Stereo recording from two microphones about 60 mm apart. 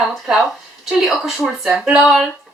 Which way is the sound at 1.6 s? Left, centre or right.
Centre.